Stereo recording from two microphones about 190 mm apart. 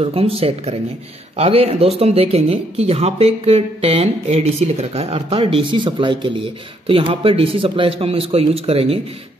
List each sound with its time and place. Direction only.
0.0 s speech: 30° right (ahead or behind)